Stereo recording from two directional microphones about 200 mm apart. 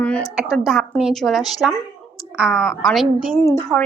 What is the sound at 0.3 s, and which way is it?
A woman's voice, centre (ahead or behind).